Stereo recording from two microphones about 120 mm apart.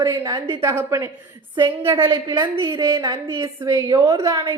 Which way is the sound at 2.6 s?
30° right (ahead or behind).